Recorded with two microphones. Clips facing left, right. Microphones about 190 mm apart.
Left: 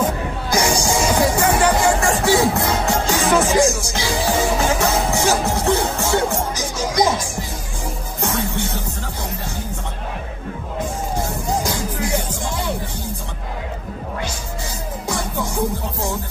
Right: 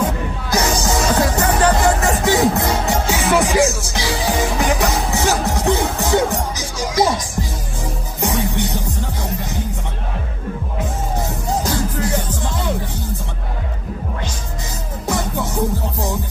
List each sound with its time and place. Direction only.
0.5 s music: 15° left (ahead or behind)
2.0 s music: 20° right (ahead or behind)
3.5 s music: 15° left (ahead or behind)
3.9 s music: 15° right (ahead or behind)
5.1 s music: 15° left (ahead or behind)
5.4 s music: 15° right (ahead or behind)
8.2 s music: 15° right (ahead or behind)
11.6 s music: 15° left (ahead or behind)